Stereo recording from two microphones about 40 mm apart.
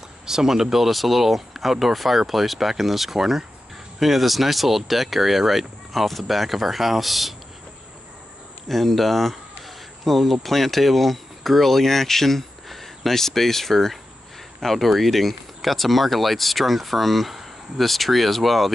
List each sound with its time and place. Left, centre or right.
0.3 s speech: centre
8.6 s speech: centre